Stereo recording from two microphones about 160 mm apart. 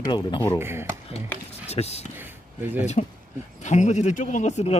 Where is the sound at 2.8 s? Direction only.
45° left (ahead or behind).